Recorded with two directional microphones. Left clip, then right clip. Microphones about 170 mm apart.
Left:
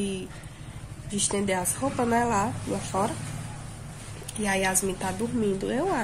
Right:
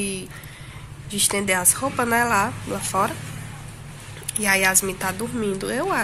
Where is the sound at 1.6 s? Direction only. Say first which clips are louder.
Right 5 dB; 10° right (ahead or behind).